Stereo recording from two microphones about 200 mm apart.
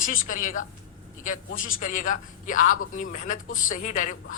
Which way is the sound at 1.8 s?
40° left (ahead or behind).